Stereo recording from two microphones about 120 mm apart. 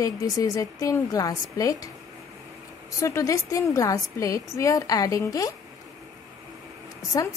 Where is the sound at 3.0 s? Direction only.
25° left (ahead or behind).